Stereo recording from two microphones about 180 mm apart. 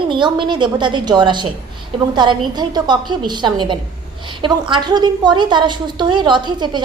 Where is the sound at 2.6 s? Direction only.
25° right (ahead or behind).